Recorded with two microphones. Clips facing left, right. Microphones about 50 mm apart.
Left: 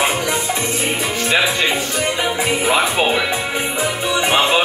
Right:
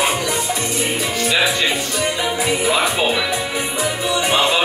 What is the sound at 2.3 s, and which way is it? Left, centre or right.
Music, left.